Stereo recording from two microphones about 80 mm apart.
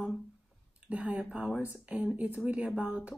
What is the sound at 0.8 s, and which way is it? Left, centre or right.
Speech, centre.